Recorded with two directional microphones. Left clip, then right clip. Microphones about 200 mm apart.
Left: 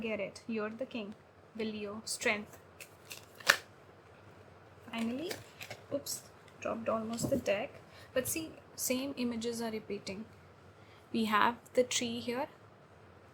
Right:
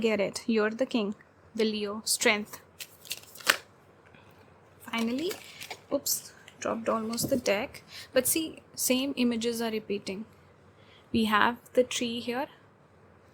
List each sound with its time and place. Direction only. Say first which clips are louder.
0.0 s a woman's voice: right 10 dB; 40° right (ahead or behind)
4.9 s a woman's voice: right 7 dB; 40° right (ahead or behind); by 12.5 s 25° right (ahead or behind)